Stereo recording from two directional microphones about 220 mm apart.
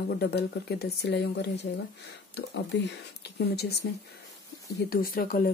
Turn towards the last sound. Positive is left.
turn(degrees=40)  # may be behind; listen again after turning